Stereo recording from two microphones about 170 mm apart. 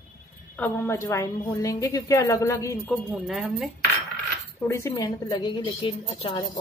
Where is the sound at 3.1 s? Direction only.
5° right (ahead or behind).